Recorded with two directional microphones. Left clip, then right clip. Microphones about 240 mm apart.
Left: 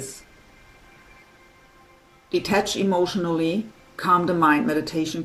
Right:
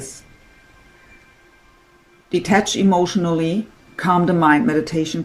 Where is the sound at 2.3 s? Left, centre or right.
Right.